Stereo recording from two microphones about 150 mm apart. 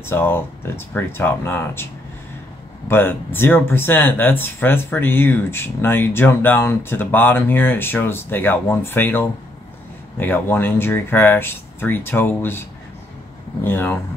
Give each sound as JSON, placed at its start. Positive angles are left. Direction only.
{"t": 0.0, "sound": "speech", "side_deg": 15}
{"t": 2.9, "sound": "speech", "side_deg": 15}
{"t": 13.7, "sound": "speech", "side_deg": 15}